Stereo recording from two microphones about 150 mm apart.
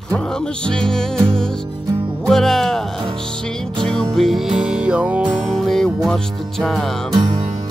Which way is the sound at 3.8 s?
5° left (ahead or behind).